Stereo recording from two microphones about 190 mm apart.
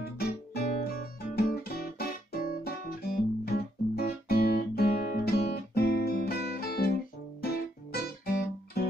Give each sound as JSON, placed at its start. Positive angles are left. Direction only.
{"t": 0.0, "sound": "guitar", "side_deg": 55}
{"t": 5.8, "sound": "music", "side_deg": 55}
{"t": 7.9, "sound": "guitar", "side_deg": 55}